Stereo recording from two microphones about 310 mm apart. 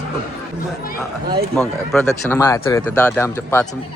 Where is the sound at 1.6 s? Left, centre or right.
Centre.